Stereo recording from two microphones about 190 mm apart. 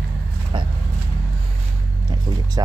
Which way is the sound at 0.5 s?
25° right (ahead or behind).